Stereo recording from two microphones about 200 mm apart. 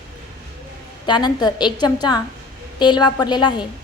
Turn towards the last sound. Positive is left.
turn(degrees=20)  # may be behind; listen again after turning